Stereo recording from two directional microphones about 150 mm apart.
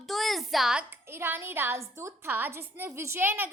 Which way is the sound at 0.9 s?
15° right (ahead or behind).